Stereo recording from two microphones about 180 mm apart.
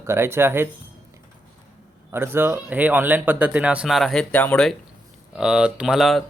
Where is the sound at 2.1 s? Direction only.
10° right (ahead or behind).